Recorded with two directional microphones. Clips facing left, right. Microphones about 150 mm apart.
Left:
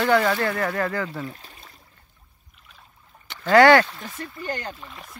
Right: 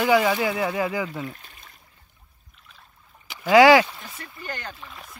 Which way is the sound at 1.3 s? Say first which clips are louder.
Left 2 dB; 35° left (ahead or behind).